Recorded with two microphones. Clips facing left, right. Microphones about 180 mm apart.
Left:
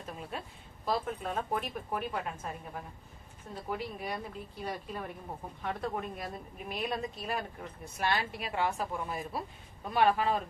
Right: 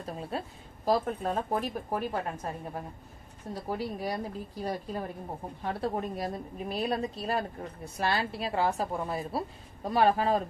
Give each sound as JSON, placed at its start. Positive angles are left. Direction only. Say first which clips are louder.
{"t": 0.0, "sound": "a woman's voice", "louder": "right 5 dB", "side_deg": -35}